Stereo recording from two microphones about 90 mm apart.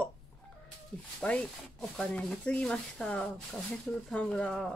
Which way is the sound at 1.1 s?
10° left (ahead or behind).